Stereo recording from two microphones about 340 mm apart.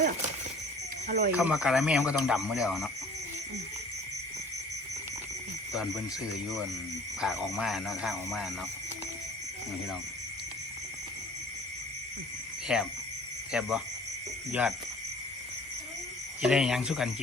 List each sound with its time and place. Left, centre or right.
1.0 s speech: right
1.3 s speech: centre
5.7 s speech: centre
7.2 s speech: centre
12.6 s speech: centre
16.4 s speech: centre